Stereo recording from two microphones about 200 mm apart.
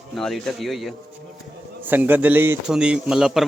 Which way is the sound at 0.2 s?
Centre (ahead or behind).